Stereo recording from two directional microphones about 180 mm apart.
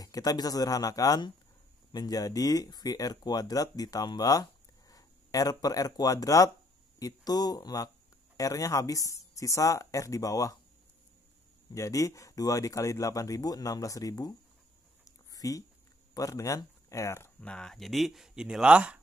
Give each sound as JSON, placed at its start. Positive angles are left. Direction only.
{"t": 0.0, "sound": "speech", "side_deg": 20}
{"t": 11.7, "sound": "speech", "side_deg": 15}
{"t": 15.0, "sound": "a sound", "side_deg": 20}
{"t": 16.2, "sound": "speech", "side_deg": 20}